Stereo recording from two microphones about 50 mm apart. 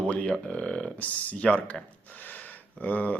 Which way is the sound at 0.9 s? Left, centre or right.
Left.